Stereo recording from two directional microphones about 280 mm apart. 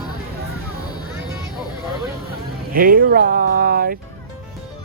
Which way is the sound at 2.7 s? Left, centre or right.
Right.